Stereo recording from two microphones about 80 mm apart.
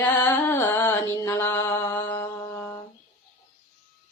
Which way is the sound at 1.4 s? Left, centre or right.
Left.